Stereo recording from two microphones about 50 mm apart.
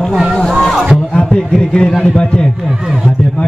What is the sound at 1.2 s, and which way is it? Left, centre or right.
A man's voice, centre.